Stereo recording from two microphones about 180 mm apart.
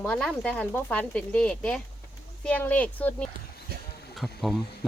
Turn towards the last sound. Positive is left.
turn(degrees=0)  # may be behind; listen again after turning